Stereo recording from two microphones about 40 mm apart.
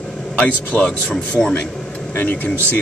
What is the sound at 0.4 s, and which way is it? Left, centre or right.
Speech, left.